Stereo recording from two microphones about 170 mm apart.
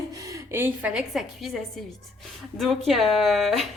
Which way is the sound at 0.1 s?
20° right (ahead or behind).